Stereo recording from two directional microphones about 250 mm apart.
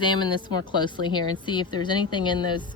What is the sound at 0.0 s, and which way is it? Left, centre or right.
A woman's voice, centre.